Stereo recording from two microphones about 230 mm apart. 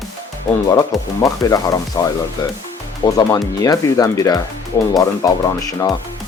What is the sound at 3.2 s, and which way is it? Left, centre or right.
Speech, centre.